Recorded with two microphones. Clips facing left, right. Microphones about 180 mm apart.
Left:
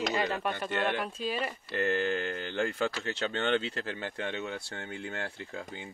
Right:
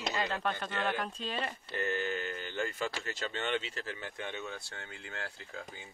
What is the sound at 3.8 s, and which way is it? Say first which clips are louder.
Speech: left 5 dB; 70° left (ahead or behind).